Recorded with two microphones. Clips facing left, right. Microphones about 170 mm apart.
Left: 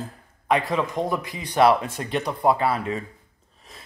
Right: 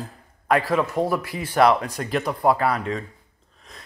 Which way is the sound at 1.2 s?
20° left (ahead or behind).